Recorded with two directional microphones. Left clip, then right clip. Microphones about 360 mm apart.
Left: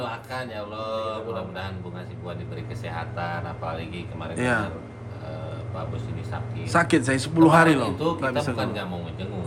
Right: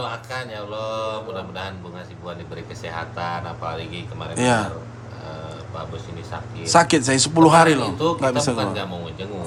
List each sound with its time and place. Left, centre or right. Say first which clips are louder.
0.0 s speech: right 3 dB; centre
2.8 s a man's voice: right 4 dB; centre
6.7 s speech: right 5 dB; centre
7.9 s a man's voice: right 5 dB; centre